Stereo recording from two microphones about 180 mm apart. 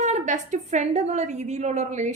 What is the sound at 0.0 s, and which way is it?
A woman's voice, 40° right (ahead or behind).